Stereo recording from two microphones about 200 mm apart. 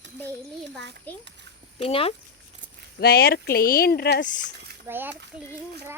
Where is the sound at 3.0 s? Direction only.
50° left (ahead or behind).